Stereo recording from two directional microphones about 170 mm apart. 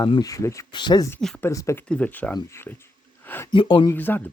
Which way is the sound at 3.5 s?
30° left (ahead or behind).